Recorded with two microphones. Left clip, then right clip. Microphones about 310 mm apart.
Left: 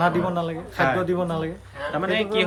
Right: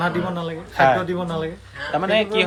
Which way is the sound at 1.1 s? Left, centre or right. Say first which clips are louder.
Even; centre.